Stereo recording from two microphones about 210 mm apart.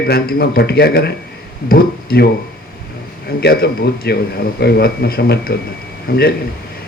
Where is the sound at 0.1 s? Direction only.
45° left (ahead or behind).